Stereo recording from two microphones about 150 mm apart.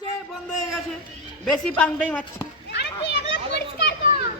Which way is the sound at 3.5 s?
90° left.